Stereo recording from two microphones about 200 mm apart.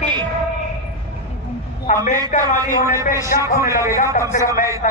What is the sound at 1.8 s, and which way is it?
Speech, 40° left (ahead or behind).